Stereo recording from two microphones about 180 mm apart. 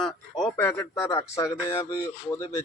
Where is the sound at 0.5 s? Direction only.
15° left (ahead or behind).